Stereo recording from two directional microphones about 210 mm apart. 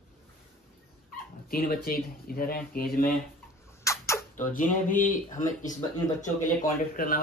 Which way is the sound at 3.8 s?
15° left (ahead or behind).